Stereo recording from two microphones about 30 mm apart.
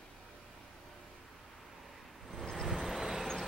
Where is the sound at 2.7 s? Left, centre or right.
Centre.